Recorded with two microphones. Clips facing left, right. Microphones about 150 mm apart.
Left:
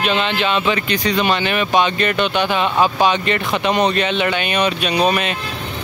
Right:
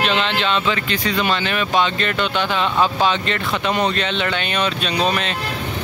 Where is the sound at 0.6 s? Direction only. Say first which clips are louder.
Left 3 dB; 20° left (ahead or behind).